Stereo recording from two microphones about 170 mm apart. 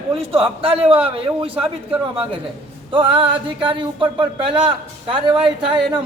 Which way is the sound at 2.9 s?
30° right (ahead or behind).